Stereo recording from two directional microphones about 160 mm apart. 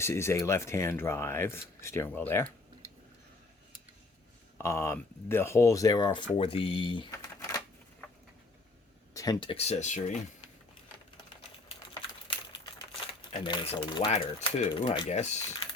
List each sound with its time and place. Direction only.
0.0 s speech: 15° left (ahead or behind)
4.5 s speech: 15° left (ahead or behind)
6.3 s speech: 35° left (ahead or behind)
7.1 s typewriter: 20° left (ahead or behind)
9.1 s speech: 25° left (ahead or behind); by 10.2 s 50° left (ahead or behind)
11.9 s a sound: 30° left (ahead or behind)
13.4 s speech: 30° left (ahead or behind); by 15.5 s 45° left (ahead or behind)